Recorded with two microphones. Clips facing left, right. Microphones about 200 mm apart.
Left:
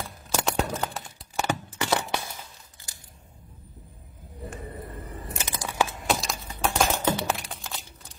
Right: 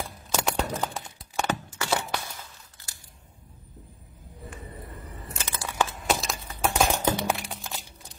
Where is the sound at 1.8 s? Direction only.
20° left (ahead or behind).